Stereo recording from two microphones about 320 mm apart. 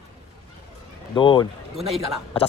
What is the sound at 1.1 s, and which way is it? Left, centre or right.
Speech, centre.